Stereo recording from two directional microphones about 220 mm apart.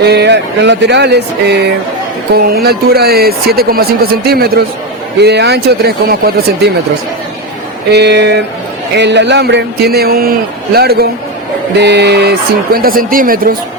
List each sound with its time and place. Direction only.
0.0 s speech: 50° right (ahead or behind)
7.9 s speech: 50° right (ahead or behind)